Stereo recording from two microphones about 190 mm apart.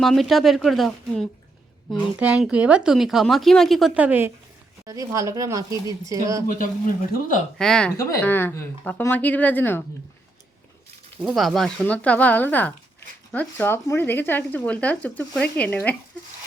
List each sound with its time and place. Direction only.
0.0 s speech: centre (ahead or behind); by 6.4 s 15° right (ahead or behind)
7.1 s speech: 45° left (ahead or behind)
7.6 s speech: 5° left (ahead or behind)
11.2 s speech: centre (ahead or behind)